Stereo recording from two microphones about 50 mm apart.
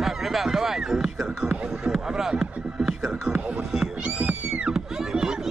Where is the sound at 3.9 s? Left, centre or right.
Right.